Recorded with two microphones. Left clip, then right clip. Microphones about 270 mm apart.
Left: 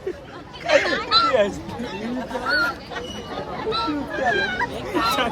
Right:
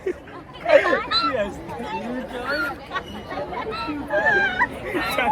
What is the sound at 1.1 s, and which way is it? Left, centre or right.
Speech, right.